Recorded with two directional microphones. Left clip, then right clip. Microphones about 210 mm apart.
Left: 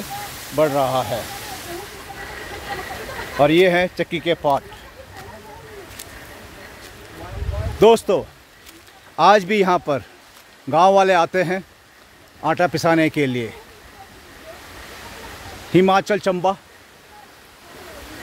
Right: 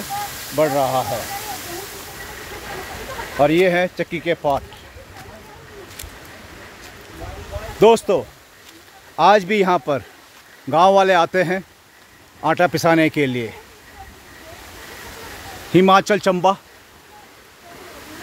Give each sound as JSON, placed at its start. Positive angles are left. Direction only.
{"t": 0.6, "sound": "a man's voice", "side_deg": 5}
{"t": 3.3, "sound": "speech", "side_deg": 10}
{"t": 7.8, "sound": "a man's voice", "side_deg": 0}
{"t": 15.9, "sound": "speech", "side_deg": -25}